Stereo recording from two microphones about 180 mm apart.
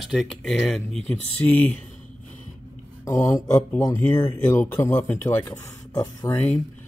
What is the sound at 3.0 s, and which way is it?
Speech, 15° left (ahead or behind).